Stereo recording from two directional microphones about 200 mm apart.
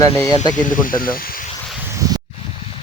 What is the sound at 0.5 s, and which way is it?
Speech, 40° left (ahead or behind).